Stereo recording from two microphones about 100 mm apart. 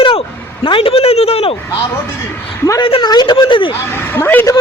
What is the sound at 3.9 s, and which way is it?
Speech, 25° left (ahead or behind).